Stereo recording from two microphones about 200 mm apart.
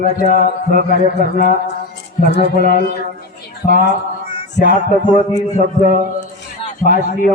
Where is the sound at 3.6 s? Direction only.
20° left (ahead or behind).